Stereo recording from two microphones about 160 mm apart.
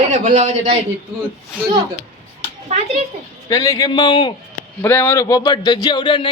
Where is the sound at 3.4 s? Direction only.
25° left (ahead or behind).